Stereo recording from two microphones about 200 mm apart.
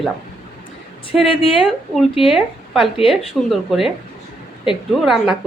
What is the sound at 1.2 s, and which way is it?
Speech, 25° left (ahead or behind).